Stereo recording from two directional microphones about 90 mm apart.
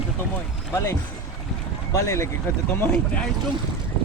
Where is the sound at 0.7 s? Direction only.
30° left (ahead or behind).